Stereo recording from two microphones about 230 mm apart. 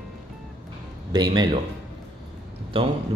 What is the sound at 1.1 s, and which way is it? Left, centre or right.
Speech, centre.